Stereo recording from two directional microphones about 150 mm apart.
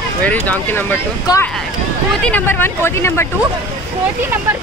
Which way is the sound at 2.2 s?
10° left (ahead or behind).